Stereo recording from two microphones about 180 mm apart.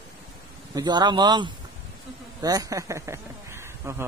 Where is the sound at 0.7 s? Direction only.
25° right (ahead or behind).